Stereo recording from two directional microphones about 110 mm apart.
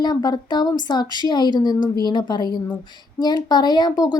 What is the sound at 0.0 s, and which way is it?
A woman's voice, 40° left (ahead or behind).